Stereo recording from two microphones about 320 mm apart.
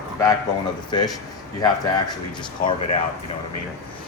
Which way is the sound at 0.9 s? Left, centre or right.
Centre.